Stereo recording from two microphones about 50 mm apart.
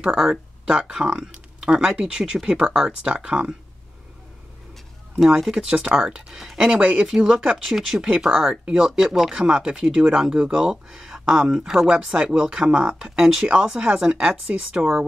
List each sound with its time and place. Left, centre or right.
0.0 s speech: centre
5.4 s speech: centre
5.7 s speech: centre
6.6 s speech: centre